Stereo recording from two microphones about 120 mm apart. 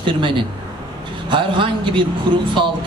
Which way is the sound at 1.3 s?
45° right (ahead or behind).